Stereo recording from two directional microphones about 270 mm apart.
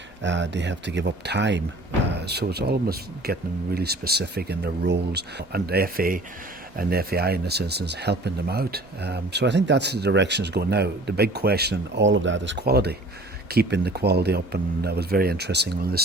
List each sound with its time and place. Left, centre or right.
0.2 s speech: right